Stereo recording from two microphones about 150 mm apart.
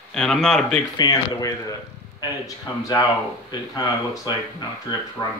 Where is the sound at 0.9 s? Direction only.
25° left (ahead or behind).